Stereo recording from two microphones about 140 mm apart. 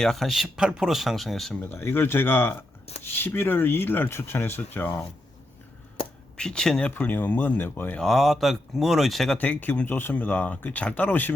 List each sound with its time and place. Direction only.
0.0 s speech: centre (ahead or behind)
1.7 s speech: 15° left (ahead or behind)
6.3 s speech: 5° left (ahead or behind)
8.0 s speech: centre (ahead or behind)